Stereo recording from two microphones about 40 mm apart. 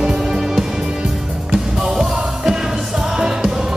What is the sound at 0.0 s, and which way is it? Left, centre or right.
Music, centre.